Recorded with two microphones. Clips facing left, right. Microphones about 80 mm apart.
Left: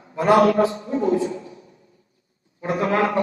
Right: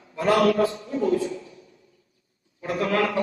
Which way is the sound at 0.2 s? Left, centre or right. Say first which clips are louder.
Left 4 dB; left.